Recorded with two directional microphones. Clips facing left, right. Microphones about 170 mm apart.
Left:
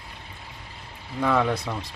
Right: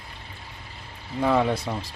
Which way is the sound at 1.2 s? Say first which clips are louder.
Right 1 dB; 30° right (ahead or behind).